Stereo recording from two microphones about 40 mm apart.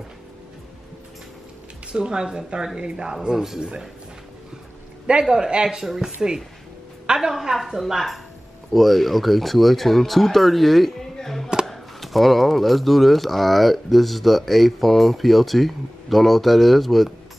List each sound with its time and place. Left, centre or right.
1.9 s a woman's voice: centre
5.3 s a woman's voice: centre
5.9 s a woman's voice: centre
7.2 s a woman's voice: centre
8.7 s speech: centre